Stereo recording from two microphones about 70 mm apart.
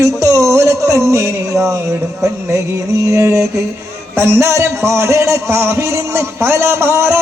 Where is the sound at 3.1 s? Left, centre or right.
Right.